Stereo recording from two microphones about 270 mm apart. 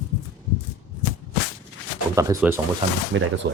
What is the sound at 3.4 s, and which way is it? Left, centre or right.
Speech, right.